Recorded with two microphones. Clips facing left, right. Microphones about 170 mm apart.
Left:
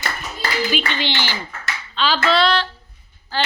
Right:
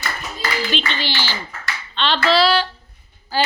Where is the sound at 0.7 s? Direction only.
10° left (ahead or behind).